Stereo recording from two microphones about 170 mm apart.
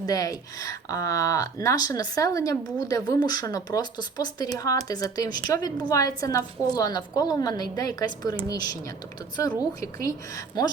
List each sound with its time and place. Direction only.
0.0 s speech: 20° left (ahead or behind)
10.0 s speech: 20° left (ahead or behind)